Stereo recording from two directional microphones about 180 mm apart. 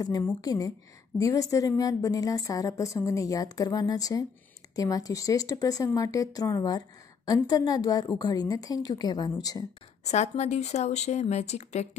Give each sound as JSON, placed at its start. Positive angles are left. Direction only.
{"t": 0.4, "sound": "a woman's voice", "side_deg": 20}
{"t": 10.0, "sound": "speech", "side_deg": 40}